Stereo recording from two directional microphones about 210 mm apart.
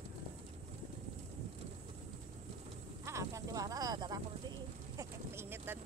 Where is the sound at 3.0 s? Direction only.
15° right (ahead or behind).